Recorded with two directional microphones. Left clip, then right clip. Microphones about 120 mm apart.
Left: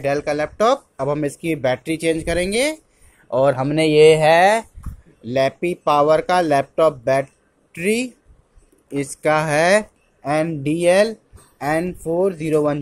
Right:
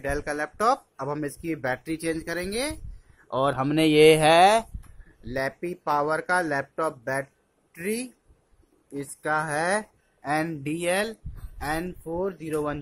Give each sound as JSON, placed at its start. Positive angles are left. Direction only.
{"t": 0.0, "sound": "speech", "side_deg": 0}
{"t": 3.3, "sound": "speech", "side_deg": -5}
{"t": 3.7, "sound": "speech", "side_deg": -15}
{"t": 5.2, "sound": "speech", "side_deg": 10}
{"t": 10.2, "sound": "speech", "side_deg": 5}
{"t": 10.6, "sound": "speech", "side_deg": 20}